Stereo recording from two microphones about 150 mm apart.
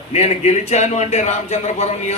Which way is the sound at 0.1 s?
45° left (ahead or behind).